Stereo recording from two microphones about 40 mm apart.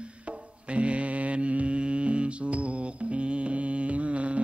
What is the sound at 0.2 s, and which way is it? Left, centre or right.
Music, right.